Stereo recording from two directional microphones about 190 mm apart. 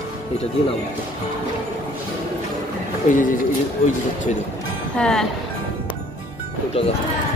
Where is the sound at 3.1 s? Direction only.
45° left (ahead or behind).